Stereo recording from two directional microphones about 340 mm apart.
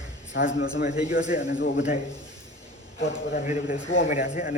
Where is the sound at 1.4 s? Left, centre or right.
Left.